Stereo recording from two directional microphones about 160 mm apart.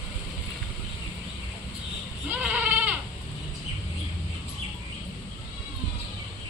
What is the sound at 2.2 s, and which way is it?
Goat, 10° right (ahead or behind).